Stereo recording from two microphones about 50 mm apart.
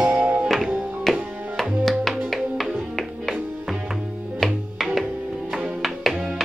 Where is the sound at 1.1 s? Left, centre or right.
Centre.